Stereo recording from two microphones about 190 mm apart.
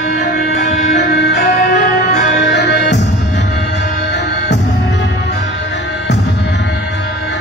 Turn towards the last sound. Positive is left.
turn(degrees=65)  # may be behind; listen again after turning